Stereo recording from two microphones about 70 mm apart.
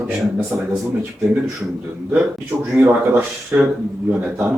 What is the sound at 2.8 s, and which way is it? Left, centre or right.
Speech, right.